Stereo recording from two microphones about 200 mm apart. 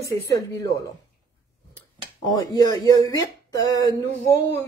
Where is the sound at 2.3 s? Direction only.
20° left (ahead or behind).